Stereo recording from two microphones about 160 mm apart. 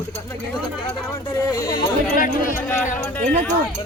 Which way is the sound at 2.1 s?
60° left (ahead or behind).